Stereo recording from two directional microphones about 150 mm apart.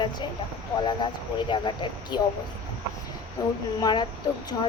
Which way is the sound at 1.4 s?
35° left (ahead or behind).